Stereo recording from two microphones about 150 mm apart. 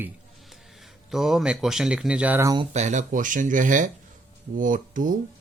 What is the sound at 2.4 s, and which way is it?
Speech, 25° right (ahead or behind).